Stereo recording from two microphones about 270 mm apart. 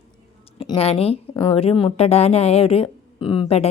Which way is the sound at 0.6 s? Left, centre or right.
Left.